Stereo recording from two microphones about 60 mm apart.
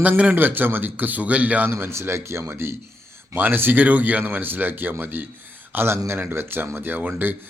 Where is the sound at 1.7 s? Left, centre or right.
Right.